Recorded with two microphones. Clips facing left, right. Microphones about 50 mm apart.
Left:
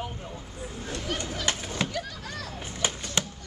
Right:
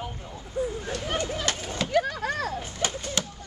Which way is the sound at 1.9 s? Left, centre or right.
Right.